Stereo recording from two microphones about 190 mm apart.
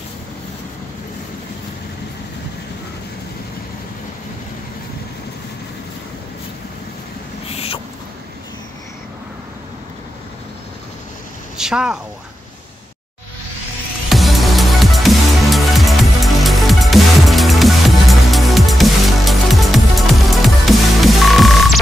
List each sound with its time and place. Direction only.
7.4 s rodents: 30° left (ahead or behind)
11.5 s speech: 5° right (ahead or behind)
14.0 s music: centre (ahead or behind)